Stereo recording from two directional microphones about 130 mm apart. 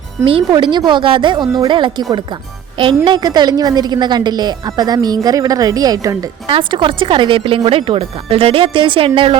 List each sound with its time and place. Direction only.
0.3 s a woman's voice: 40° right (ahead or behind)
6.5 s a woman's voice: 40° right (ahead or behind)